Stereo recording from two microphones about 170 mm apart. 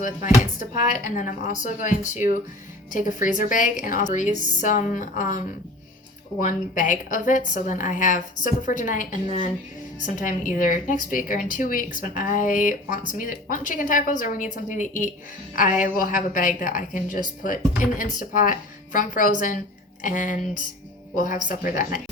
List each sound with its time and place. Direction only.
0.6 s speech: 50° left (ahead or behind)
6.4 s speech: 50° left (ahead or behind)